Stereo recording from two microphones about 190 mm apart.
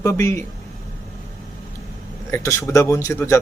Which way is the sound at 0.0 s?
15° left (ahead or behind).